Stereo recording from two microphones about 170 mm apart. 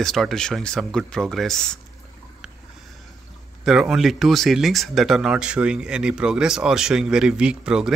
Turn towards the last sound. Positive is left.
turn(degrees=-5)  # may be behind; listen again after turning